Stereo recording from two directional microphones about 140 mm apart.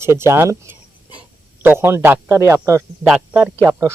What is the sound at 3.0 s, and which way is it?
Speech, 10° right (ahead or behind).